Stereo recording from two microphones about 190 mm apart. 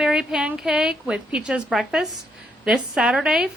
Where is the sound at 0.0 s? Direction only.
5° right (ahead or behind).